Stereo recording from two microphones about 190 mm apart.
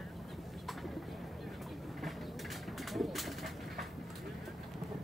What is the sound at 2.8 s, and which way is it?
Bird, centre (ahead or behind).